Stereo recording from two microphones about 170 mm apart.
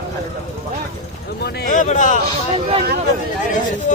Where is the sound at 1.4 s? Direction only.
75° left (ahead or behind).